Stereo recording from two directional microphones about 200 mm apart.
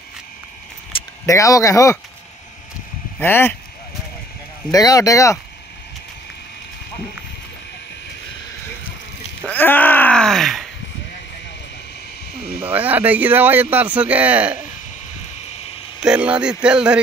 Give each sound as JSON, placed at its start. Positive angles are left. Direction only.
{"t": 0.9, "sound": "speech", "side_deg": 15}
{"t": 3.2, "sound": "speech", "side_deg": 10}
{"t": 4.6, "sound": "speech", "side_deg": 15}
{"t": 9.5, "sound": "groan", "side_deg": 10}
{"t": 12.6, "sound": "speech", "side_deg": -10}
{"t": 16.0, "sound": "speech", "side_deg": -5}